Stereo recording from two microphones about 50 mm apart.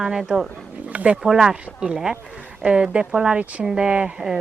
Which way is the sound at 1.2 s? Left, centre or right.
Centre.